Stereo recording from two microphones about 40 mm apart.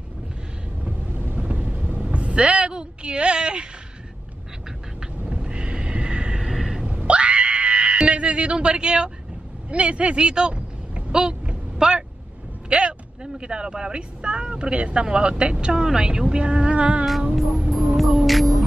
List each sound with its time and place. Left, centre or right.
1.4 s a sound: right
5.4 s neigh: right
6.4 s a sound: centre
6.8 s screaming: right
9.7 s speech: right
11.1 s vehicle: right
12.6 s speech: right
17.4 s music: centre